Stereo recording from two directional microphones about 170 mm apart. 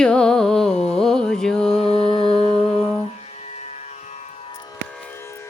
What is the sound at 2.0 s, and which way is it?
Music, 25° right (ahead or behind).